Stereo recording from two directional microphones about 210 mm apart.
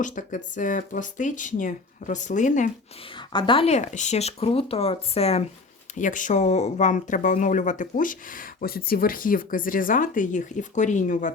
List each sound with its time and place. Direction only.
0.0 s speech: 40° left (ahead or behind)
3.3 s speech: 25° left (ahead or behind)